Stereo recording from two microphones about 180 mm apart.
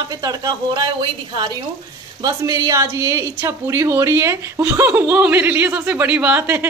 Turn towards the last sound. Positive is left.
turn(degrees=-15)  # may be behind; listen again after turning